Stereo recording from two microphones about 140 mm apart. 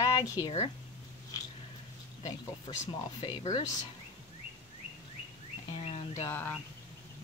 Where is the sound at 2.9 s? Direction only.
30° left (ahead or behind).